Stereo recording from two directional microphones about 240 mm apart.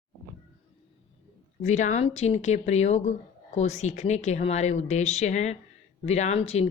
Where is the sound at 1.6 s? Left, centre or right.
Left.